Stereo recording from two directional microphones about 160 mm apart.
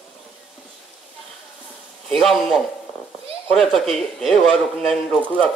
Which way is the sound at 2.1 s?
Centre (ahead or behind).